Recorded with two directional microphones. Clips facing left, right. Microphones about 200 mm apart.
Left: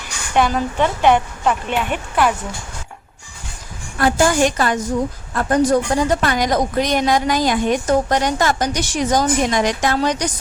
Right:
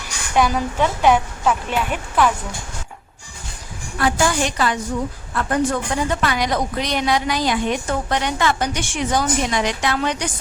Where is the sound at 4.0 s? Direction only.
45° left (ahead or behind).